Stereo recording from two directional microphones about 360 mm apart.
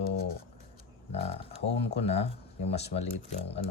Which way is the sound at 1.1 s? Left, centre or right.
Centre.